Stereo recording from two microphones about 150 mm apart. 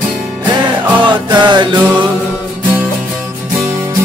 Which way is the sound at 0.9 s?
30° right (ahead or behind).